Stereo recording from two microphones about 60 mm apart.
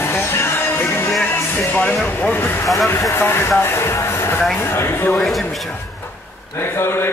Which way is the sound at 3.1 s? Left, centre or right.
Left.